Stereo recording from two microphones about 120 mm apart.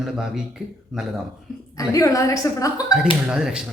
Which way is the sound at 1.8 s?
30° left (ahead or behind).